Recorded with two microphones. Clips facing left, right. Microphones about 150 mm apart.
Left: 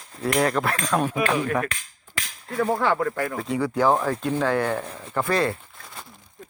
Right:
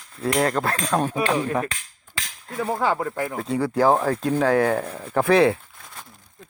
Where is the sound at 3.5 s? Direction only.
35° right (ahead or behind).